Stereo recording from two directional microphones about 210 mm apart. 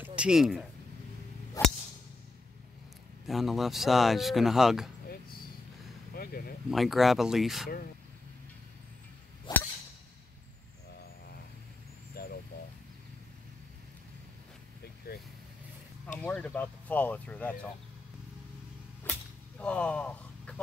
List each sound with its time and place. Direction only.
0.0 s speech: 5° right (ahead or behind)
1.6 s a sound: 15° left (ahead or behind)
3.3 s speech: centre (ahead or behind)
6.1 s a sound: 45° left (ahead or behind)
6.7 s speech: centre (ahead or behind)
9.5 s whip: 20° left (ahead or behind)
12.2 s a sound: 45° left (ahead or behind)
16.2 s speech: 5° left (ahead or behind)
19.1 s arrow: 5° left (ahead or behind)
19.6 s speech: 5° left (ahead or behind)